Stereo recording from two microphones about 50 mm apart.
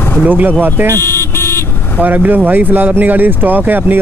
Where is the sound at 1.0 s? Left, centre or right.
Left.